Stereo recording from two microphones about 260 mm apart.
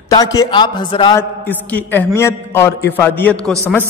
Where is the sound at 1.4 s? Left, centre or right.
Centre.